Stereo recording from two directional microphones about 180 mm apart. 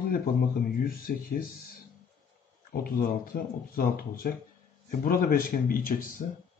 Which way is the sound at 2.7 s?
55° left (ahead or behind).